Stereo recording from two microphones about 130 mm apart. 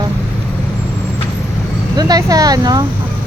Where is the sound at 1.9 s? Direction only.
30° right (ahead or behind).